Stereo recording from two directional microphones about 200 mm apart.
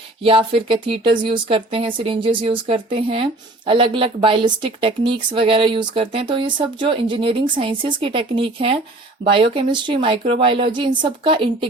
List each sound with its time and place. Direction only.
0.2 s a woman's voice: 25° right (ahead or behind)